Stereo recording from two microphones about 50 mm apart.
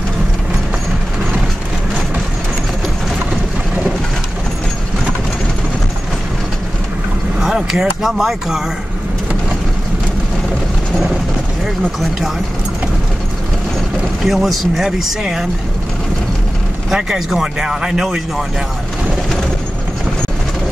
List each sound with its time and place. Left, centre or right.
7.3 s speech: centre
11.6 s speech: centre
14.2 s speech: centre
16.9 s speech: centre